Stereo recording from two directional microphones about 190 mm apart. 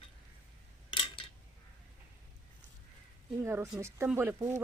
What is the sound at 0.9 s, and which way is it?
Scissors, 25° left (ahead or behind).